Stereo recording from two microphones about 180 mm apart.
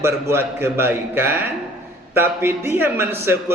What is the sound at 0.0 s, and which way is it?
A man's voice, 15° right (ahead or behind).